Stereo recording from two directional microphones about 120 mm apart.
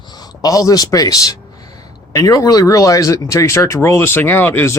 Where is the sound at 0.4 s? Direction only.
30° left (ahead or behind).